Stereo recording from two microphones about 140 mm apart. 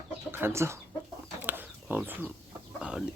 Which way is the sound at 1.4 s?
15° right (ahead or behind).